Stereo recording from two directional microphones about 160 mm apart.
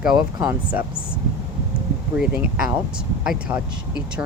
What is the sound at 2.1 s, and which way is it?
Speech, 5° right (ahead or behind).